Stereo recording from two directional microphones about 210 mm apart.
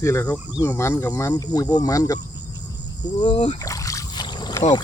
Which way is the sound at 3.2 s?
25° left (ahead or behind).